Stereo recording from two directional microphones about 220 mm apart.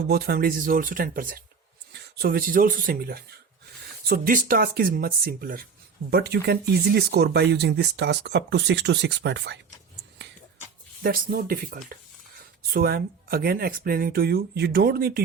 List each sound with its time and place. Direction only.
0.1 s speech: 45° right (ahead or behind)
11.0 s speech: 40° right (ahead or behind)